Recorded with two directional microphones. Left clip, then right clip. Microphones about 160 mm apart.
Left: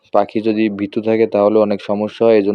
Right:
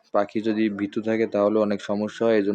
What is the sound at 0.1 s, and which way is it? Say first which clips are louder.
Speech: left 8 dB; 30° left (ahead or behind).